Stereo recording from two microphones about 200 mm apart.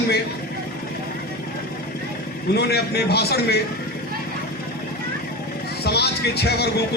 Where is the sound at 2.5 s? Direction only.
55° left (ahead or behind).